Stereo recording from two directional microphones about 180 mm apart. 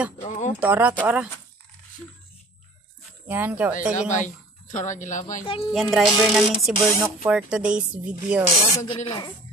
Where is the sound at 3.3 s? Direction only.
10° right (ahead or behind).